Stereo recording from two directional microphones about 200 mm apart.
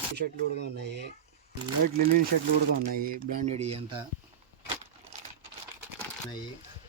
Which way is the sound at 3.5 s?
30° right (ahead or behind).